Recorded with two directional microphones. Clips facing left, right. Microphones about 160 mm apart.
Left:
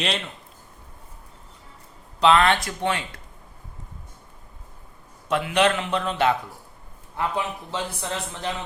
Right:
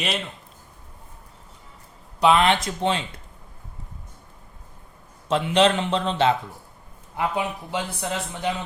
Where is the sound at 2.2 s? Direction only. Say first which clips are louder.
Even; 15° right (ahead or behind).